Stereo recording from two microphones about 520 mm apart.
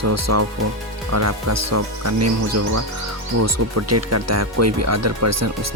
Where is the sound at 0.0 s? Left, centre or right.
Right.